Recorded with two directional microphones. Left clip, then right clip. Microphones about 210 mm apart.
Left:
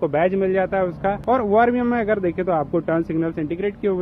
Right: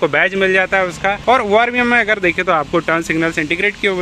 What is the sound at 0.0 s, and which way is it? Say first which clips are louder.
Speech: right 5 dB; 10° right (ahead or behind).